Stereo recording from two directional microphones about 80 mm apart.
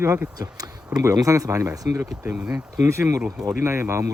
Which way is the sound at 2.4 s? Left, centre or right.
Centre.